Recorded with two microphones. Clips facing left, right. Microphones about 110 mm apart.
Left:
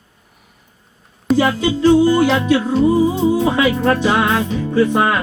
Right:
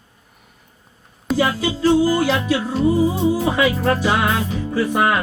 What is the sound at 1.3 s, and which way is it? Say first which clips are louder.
Music: left 4 dB; centre (ahead or behind).